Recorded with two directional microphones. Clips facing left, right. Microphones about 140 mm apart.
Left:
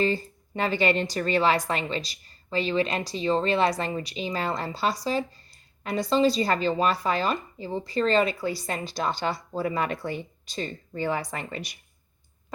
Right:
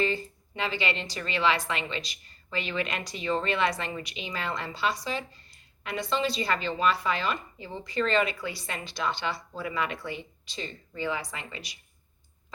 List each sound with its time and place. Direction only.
0.0 s speech: 35° left (ahead or behind)